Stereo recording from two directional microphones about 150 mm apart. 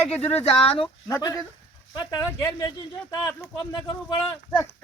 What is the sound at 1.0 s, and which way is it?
Speech, 25° left (ahead or behind).